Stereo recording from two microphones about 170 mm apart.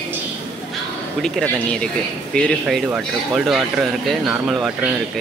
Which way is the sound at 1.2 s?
5° left (ahead or behind).